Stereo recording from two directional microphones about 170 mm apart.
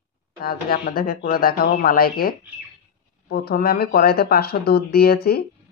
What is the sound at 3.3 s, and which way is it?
Speech, 60° left (ahead or behind).